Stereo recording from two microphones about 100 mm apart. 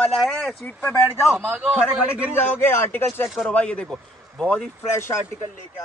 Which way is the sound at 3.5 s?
10° left (ahead or behind).